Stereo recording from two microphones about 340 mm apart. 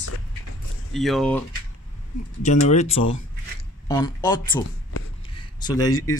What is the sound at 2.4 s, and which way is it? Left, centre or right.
Speech, centre.